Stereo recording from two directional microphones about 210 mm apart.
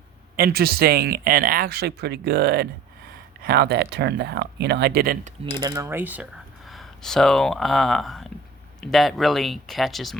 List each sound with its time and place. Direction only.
0.3 s speech: 45° right (ahead or behind)
5.5 s mechanisms: 20° right (ahead or behind)
6.7 s speech: centre (ahead or behind)